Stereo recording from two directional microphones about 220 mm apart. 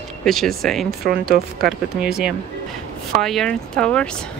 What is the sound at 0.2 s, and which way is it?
Speech, centre (ahead or behind).